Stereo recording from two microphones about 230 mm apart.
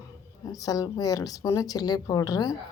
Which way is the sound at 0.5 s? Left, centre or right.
Centre.